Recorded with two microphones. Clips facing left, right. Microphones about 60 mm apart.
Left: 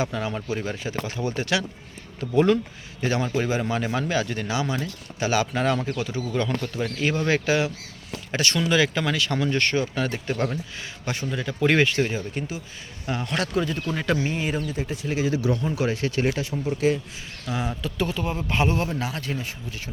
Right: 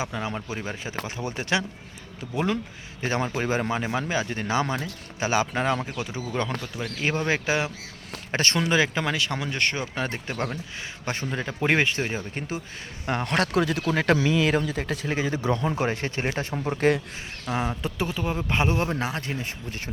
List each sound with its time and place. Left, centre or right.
0.0 s speech: centre
2.3 s speech: centre
3.0 s speech: right
4.5 s speech: right
4.8 s speech: right
5.7 s speech: centre
6.3 s speech: right
8.3 s speech: right
11.0 s speech: right
11.6 s speech: right
13.1 s speech: right
15.1 s speech: right
16.4 s speech: right
17.4 s a man's voice: right